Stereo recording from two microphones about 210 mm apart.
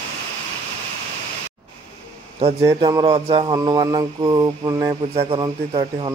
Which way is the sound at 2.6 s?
20° right (ahead or behind).